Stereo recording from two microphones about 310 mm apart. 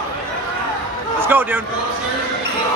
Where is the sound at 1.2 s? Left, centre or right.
Centre.